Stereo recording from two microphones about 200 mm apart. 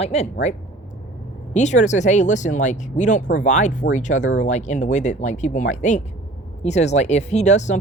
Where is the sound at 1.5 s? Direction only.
35° left (ahead or behind).